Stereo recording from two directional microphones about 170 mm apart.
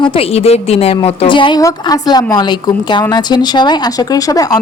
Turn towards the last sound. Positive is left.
turn(degrees=25)  # may be behind; listen again after turning